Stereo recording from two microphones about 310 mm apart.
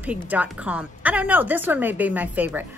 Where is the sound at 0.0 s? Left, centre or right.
Centre.